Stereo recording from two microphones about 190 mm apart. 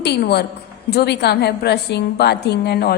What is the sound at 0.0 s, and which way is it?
A woman's voice, 60° left (ahead or behind).